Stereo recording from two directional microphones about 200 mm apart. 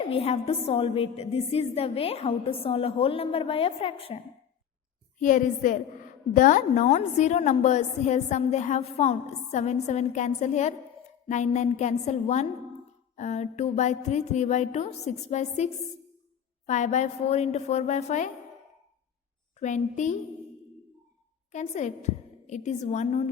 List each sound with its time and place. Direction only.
0.0 s a woman's voice: 30° left (ahead or behind)
5.2 s a woman's voice: 40° left (ahead or behind)
19.5 s a woman's voice: 35° left (ahead or behind)
21.5 s a woman's voice: 35° left (ahead or behind)